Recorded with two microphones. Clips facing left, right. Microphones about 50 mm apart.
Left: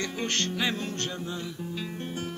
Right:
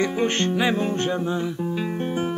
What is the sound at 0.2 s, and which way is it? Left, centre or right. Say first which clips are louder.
Music: right 4 dB; centre.